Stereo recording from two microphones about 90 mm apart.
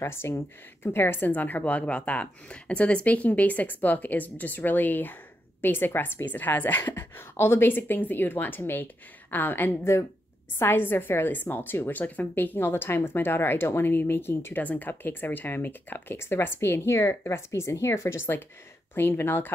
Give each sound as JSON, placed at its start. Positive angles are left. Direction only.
{"t": 0.0, "sound": "a woman's voice", "side_deg": 25}